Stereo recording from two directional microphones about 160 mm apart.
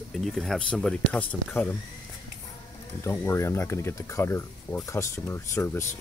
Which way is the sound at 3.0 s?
15° left (ahead or behind).